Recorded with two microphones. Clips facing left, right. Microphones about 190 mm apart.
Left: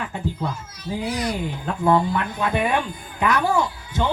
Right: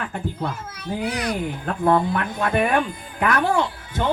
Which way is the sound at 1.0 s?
60° right (ahead or behind).